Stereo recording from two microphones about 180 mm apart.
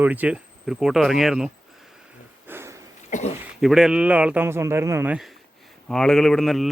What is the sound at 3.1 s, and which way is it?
Speech, 45° left (ahead or behind).